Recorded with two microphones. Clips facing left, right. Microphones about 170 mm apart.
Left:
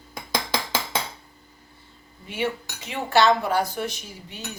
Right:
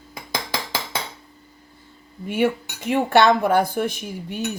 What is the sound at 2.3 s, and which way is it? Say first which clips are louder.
Cutlery: right 7 dB; 50° right (ahead or behind).